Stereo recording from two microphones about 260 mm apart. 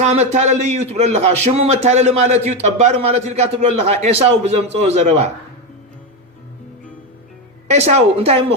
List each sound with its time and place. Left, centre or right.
0.0 s a man's voice: right
7.7 s a man's voice: right